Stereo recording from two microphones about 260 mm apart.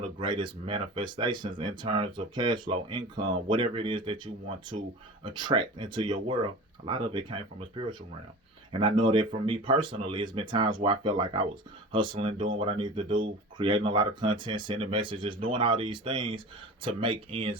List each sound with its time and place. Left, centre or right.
0.0 s speech: centre